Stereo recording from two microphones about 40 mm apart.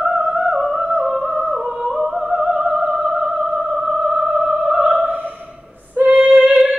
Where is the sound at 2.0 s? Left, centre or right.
Centre.